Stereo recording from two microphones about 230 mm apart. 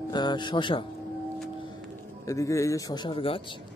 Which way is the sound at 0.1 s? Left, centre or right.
Centre.